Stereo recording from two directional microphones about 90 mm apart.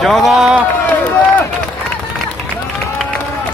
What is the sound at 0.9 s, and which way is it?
Run, 20° left (ahead or behind).